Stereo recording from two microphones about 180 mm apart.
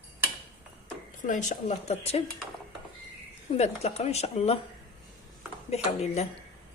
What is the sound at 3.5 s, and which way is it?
Speech, 35° left (ahead or behind).